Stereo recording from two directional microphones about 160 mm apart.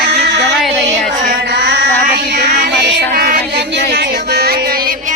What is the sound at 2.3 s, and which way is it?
Music, 90° right.